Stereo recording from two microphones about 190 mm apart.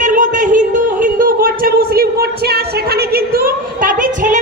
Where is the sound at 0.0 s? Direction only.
40° right (ahead or behind).